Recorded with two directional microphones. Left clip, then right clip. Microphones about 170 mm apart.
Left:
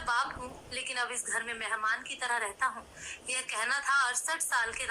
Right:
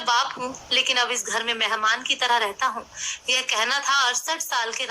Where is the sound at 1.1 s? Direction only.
35° right (ahead or behind).